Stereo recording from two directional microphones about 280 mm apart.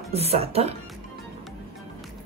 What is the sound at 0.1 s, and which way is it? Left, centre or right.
Speech, right.